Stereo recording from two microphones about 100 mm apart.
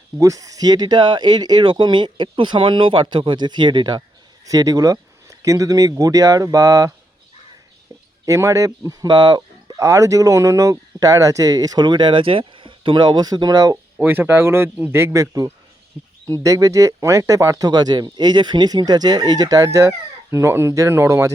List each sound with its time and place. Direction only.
0.2 s speech: 35° right (ahead or behind)
8.2 s speech: 35° right (ahead or behind)
9.0 s speech: 50° right (ahead or behind)
9.7 s speech: 30° right (ahead or behind)
14.0 s a man's voice: 20° right (ahead or behind)